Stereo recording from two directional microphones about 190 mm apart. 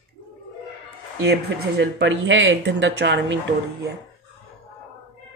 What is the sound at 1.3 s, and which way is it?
Speech, 65° right (ahead or behind).